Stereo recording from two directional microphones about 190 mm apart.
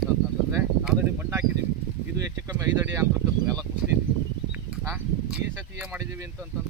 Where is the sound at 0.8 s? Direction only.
10° right (ahead or behind).